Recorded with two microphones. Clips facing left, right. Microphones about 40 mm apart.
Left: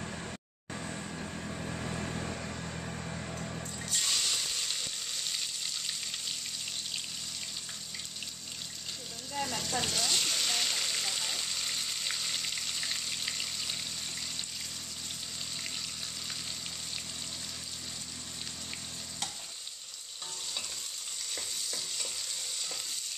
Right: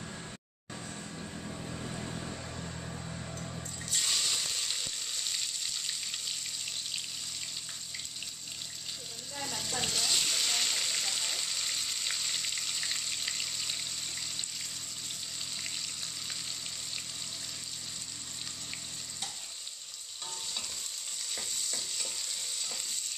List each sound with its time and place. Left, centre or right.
1.7 s vehicle: left
3.9 s frying: centre
9.3 s a sound: centre
21.4 s stir: centre